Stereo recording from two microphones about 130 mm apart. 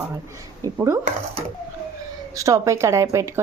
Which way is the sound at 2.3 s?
25° right (ahead or behind).